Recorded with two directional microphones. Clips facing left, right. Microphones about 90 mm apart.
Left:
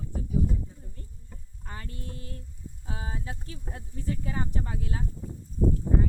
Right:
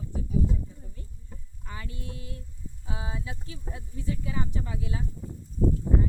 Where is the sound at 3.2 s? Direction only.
45° left (ahead or behind).